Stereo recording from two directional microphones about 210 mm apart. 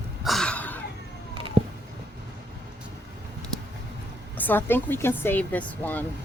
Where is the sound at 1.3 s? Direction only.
25° right (ahead or behind).